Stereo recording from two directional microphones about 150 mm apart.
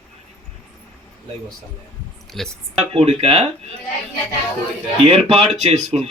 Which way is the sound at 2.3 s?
Centre (ahead or behind).